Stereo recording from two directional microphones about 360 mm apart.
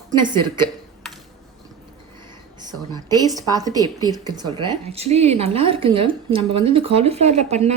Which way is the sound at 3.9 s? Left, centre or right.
Centre.